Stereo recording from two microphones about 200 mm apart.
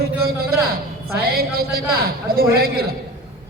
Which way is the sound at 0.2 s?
50° right (ahead or behind).